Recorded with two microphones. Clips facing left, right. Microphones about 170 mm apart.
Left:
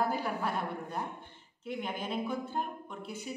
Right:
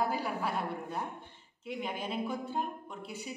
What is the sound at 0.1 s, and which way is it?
Speech, 5° right (ahead or behind).